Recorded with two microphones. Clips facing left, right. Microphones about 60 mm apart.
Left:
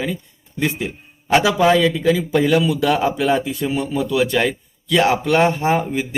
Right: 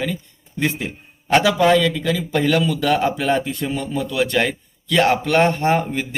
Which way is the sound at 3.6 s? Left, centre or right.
Centre.